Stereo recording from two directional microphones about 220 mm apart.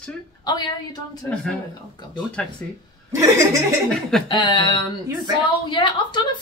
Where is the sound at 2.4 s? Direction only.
5° left (ahead or behind).